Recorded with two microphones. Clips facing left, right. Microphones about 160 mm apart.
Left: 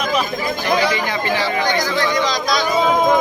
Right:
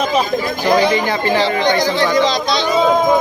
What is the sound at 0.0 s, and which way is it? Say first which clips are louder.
Speech: right 4 dB; 35° right (ahead or behind).